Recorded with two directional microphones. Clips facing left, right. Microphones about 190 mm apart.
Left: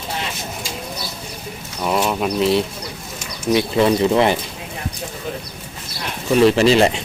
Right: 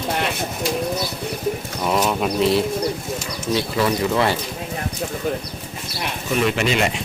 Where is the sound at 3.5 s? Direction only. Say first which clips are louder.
Left 5 dB; 25° left (ahead or behind).